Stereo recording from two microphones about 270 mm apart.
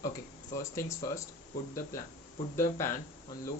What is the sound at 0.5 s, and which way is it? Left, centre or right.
Speech, centre.